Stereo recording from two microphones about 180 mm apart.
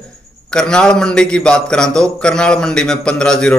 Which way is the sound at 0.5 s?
5° left (ahead or behind).